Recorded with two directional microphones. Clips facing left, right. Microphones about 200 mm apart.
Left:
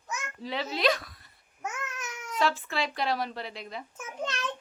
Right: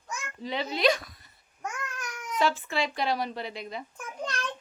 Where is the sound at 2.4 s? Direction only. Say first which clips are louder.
Right 1 dB; centre (ahead or behind).